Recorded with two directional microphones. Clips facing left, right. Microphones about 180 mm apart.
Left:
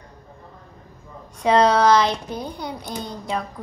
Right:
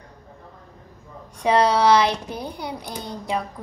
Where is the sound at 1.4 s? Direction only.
15° right (ahead or behind).